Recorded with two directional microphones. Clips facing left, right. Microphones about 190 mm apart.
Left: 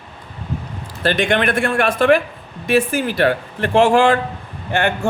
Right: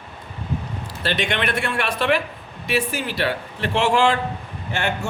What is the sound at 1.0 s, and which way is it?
A man's voice, 50° left (ahead or behind).